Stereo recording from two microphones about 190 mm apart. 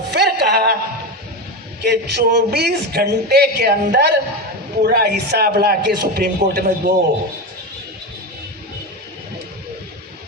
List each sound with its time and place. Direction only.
0.1 s music: 55° right (ahead or behind)
1.8 s a man's voice: 60° right (ahead or behind)